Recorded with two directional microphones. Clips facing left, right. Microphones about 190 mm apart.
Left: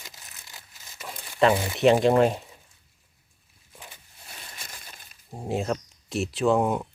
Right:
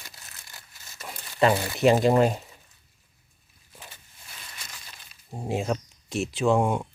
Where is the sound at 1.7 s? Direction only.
Centre (ahead or behind).